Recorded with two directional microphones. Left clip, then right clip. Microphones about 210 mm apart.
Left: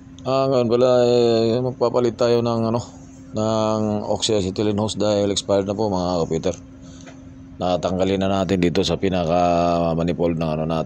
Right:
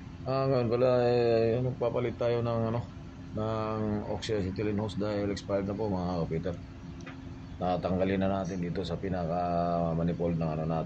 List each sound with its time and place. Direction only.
0.2 s speech: 30° left (ahead or behind)
7.6 s speech: 30° left (ahead or behind)